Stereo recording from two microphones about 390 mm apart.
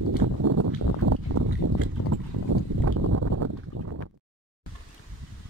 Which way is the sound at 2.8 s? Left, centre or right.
Right.